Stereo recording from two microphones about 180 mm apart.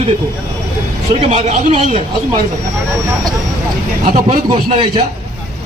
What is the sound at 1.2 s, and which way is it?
Speech, 40° right (ahead or behind).